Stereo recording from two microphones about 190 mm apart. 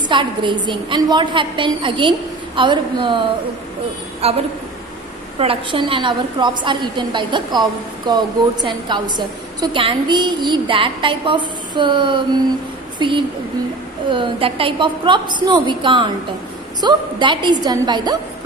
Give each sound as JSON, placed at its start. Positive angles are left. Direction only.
{"t": 0.1, "sound": "a woman's voice", "side_deg": -25}
{"t": 4.2, "sound": "a woman's voice", "side_deg": -35}
{"t": 5.4, "sound": "a woman's voice", "side_deg": -30}